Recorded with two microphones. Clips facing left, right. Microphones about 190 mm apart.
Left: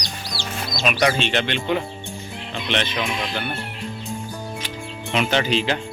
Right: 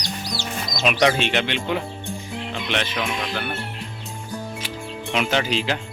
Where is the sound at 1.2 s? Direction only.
5° right (ahead or behind).